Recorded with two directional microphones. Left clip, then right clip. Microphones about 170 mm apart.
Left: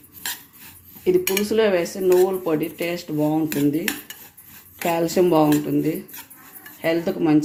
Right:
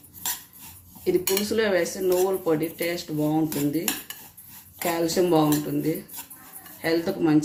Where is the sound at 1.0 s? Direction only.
45° left (ahead or behind).